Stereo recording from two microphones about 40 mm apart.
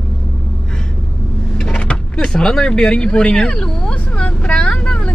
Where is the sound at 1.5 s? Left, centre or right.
Left.